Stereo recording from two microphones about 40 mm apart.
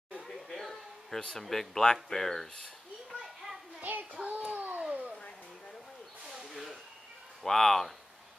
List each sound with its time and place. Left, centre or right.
0.5 s a sound: centre
1.4 s speech: centre
3.1 s children playing: centre
3.8 s child singing: right
4.2 s a sound: right
6.2 s snake: centre
7.4 s speech: centre